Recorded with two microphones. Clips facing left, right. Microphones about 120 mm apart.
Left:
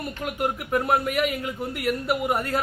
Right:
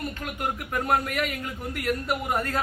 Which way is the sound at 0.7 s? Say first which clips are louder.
Left 3 dB; 10° left (ahead or behind).